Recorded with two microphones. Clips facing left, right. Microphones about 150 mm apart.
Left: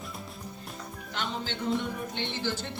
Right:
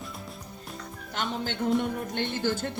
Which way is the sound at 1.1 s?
50° right (ahead or behind).